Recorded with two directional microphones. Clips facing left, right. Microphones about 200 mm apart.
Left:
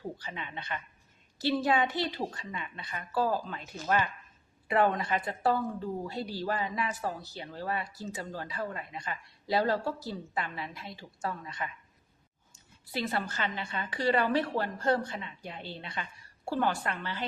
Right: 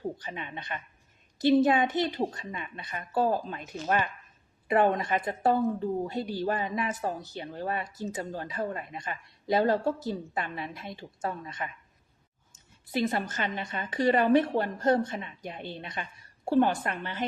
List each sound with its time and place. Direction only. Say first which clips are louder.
0.3 s a woman's voice: right 2 dB; 20° right (ahead or behind)
2.3 s speech: right 2 dB; 40° right (ahead or behind)
2.6 s a woman's voice: right 1 dB; 20° right (ahead or behind)
2.9 s speech: right 3 dB; 30° right (ahead or behind)
3.2 s a woman's voice: right 3 dB; 20° right (ahead or behind)
12.8 s a woman's voice: right 4 dB; 20° right (ahead or behind)